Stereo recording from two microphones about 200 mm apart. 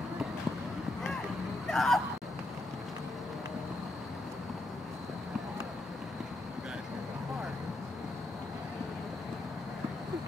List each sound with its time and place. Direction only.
1.7 s speech: centre (ahead or behind)